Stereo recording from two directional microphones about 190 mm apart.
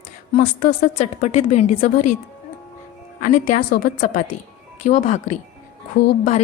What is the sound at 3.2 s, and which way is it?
A woman's voice, 45° left (ahead or behind).